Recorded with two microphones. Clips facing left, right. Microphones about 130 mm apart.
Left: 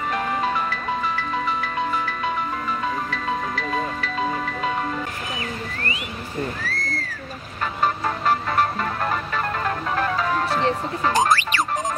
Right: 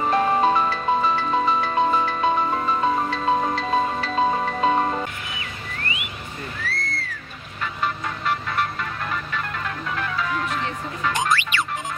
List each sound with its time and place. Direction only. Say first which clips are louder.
0.0 s music: right 5 dB; 30° right (ahead or behind)
6.6 s a sound: left 1 dB; 40° left (ahead or behind)
7.6 s music: left 4 dB; 40° left (ahead or behind)